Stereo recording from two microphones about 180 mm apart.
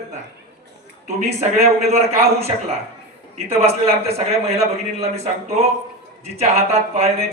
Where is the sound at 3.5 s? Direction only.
35° right (ahead or behind).